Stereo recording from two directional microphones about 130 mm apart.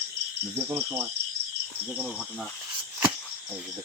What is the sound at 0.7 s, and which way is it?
Cricket, 15° right (ahead or behind).